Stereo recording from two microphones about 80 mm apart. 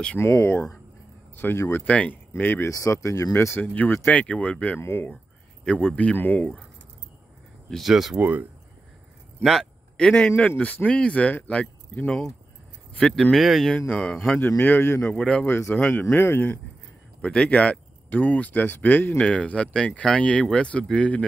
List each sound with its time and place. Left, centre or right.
0.2 s speech: left
2.6 s speech: left
4.1 s speech: centre
7.7 s speech: centre
8.2 s speech: right
9.4 s speech: centre
9.9 s speech: centre
12.9 s speech: centre
13.7 s speech: centre
14.6 s speech: left
15.1 s speech: centre
15.4 s speech: left
17.2 s speech: centre